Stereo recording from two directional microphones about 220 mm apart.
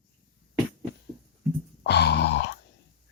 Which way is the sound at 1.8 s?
50° left (ahead or behind).